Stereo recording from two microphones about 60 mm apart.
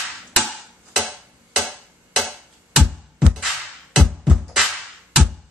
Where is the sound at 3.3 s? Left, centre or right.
Centre.